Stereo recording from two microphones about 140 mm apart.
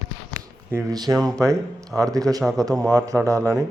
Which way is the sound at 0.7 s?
25° right (ahead or behind).